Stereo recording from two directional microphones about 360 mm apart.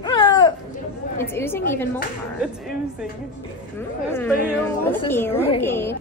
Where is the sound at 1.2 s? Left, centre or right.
Centre.